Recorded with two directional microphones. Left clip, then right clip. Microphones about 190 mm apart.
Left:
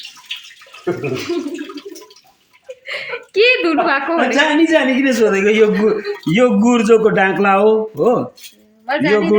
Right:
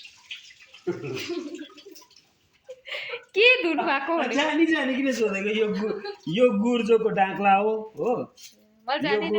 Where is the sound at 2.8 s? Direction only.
10° left (ahead or behind).